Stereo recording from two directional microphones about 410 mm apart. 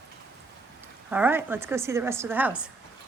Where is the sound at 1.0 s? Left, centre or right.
Centre.